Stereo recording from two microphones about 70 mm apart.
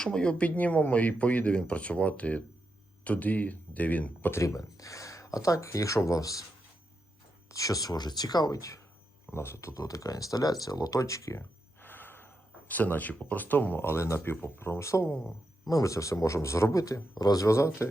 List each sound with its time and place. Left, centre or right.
0.0 s speech: centre
4.4 s speech: left
7.5 s speech: left
9.3 s speech: left
9.8 s speech: left
11.8 s speech: left
16.8 s speech: left
17.4 s speech: left